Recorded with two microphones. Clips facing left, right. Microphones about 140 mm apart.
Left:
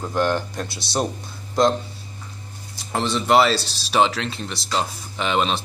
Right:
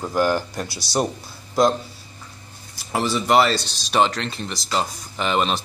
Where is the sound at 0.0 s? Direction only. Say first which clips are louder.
Right 1 dB; 5° right (ahead or behind).